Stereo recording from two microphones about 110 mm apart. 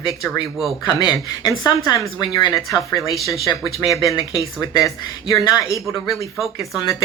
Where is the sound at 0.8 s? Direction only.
40° left (ahead or behind).